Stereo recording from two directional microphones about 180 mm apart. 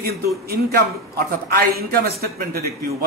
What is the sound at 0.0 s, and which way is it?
A man's voice, 60° right (ahead or behind).